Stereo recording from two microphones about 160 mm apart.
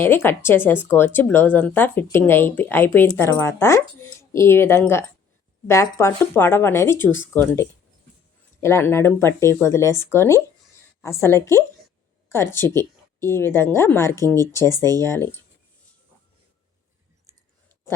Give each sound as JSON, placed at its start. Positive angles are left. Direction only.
{"t": 0.0, "sound": "speech", "side_deg": 15}